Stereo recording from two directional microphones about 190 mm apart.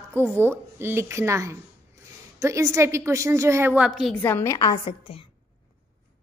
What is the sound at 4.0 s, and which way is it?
A woman's voice, 5° left (ahead or behind).